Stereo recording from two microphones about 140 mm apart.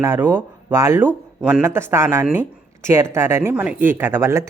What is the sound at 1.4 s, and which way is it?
Speech, 10° right (ahead or behind).